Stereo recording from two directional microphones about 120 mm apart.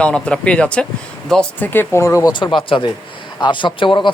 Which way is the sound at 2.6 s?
45° left (ahead or behind).